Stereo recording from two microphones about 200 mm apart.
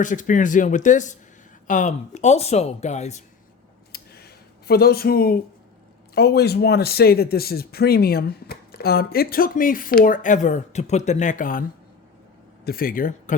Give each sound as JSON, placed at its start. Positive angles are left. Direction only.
{"t": 0.0, "sound": "speech", "side_deg": 40}
{"t": 3.9, "sound": "a sound", "side_deg": 50}
{"t": 6.1, "sound": "speech", "side_deg": 55}
{"t": 12.6, "sound": "speech", "side_deg": 45}